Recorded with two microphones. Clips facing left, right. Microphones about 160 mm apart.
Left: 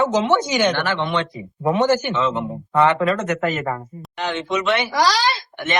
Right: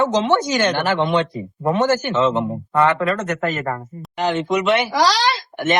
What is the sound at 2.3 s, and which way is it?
Speech, 20° right (ahead or behind).